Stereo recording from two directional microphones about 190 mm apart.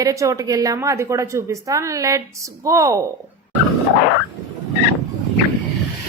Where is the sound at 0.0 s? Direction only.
15° right (ahead or behind).